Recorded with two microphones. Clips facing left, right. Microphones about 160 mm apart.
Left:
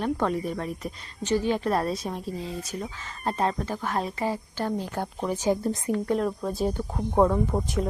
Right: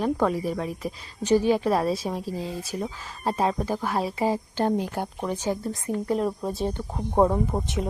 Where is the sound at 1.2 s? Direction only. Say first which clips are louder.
Right 4 dB; 10° right (ahead or behind).